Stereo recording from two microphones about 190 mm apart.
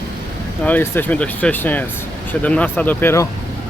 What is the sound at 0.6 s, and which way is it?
Speech, 10° left (ahead or behind).